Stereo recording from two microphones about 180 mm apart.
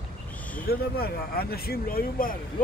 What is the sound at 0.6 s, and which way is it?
Speech, 60° left (ahead or behind).